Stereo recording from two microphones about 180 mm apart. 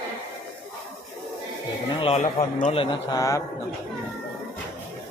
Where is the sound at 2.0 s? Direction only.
35° left (ahead or behind); by 3.4 s 20° left (ahead or behind).